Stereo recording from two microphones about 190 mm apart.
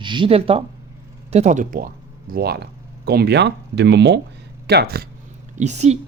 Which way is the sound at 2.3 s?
55° right (ahead or behind).